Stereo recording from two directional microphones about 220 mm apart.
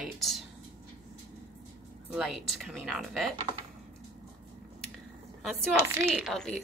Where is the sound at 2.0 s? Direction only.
Centre (ahead or behind).